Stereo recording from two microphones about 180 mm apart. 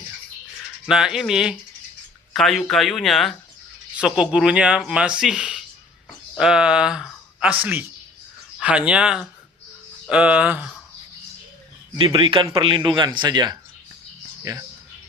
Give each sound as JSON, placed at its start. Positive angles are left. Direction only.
{"t": 0.9, "sound": "speech", "side_deg": -5}
{"t": 11.9, "sound": "speech", "side_deg": -25}